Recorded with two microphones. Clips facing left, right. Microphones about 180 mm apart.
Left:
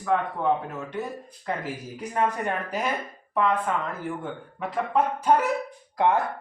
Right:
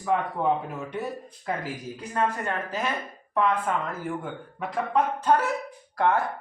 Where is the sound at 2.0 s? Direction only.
15° left (ahead or behind).